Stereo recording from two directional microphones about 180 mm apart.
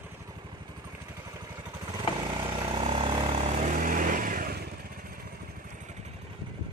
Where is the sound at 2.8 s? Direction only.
30° right (ahead or behind); by 4.6 s 50° right (ahead or behind).